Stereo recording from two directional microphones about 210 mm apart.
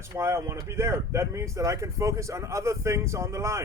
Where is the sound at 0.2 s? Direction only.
10° right (ahead or behind).